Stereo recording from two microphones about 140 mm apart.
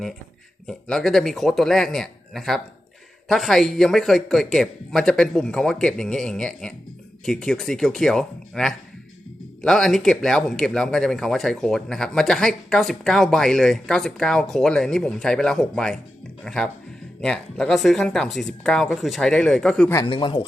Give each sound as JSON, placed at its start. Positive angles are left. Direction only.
{"t": 0.7, "sound": "speech", "side_deg": 5}
{"t": 20.1, "sound": "speech", "side_deg": 35}